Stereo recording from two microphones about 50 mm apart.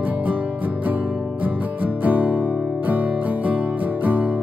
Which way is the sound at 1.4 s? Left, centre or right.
Right.